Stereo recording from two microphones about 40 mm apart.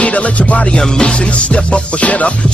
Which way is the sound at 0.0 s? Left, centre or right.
Left.